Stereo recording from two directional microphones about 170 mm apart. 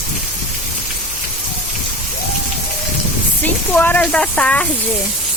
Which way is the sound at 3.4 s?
10° left (ahead or behind).